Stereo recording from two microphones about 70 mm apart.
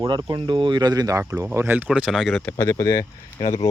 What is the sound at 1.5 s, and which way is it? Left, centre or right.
Speech, right.